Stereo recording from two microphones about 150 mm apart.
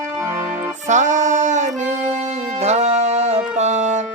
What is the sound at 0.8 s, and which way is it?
Music, 55° right (ahead or behind).